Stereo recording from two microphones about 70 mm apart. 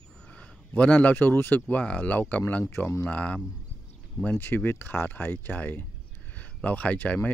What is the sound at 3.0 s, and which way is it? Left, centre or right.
Speech, centre.